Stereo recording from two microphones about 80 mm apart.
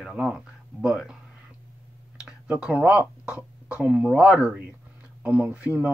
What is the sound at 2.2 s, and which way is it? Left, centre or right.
Speech, centre.